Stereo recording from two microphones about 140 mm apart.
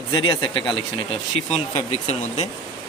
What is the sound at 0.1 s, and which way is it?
Speech, 30° left (ahead or behind).